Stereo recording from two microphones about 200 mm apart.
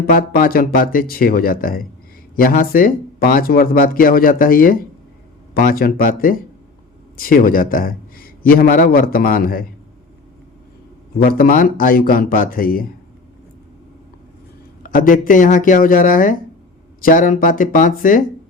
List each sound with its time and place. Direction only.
0.0 s a man's voice: 45° left (ahead or behind)
11.2 s a man's voice: 45° left (ahead or behind)
14.8 s a man's voice: 45° left (ahead or behind)